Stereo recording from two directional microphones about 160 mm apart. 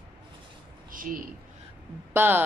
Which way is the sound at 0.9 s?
60° right (ahead or behind).